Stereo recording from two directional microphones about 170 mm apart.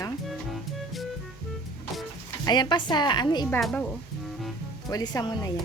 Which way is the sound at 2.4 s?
25° left (ahead or behind).